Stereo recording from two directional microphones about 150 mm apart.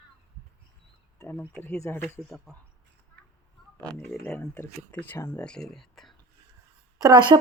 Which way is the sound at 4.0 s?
5° left (ahead or behind).